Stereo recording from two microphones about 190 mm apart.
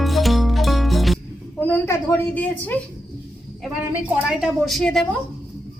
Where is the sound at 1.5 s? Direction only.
10° left (ahead or behind).